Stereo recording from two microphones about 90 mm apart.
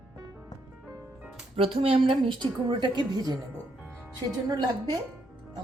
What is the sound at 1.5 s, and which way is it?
A woman's voice, 90° right.